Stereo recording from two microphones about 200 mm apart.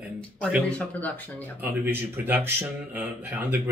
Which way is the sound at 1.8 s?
10° right (ahead or behind).